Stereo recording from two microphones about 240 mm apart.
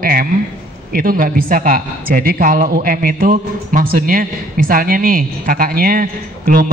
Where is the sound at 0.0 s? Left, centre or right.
Right.